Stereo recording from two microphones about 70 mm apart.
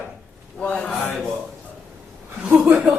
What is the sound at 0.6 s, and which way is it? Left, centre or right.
Speech, centre.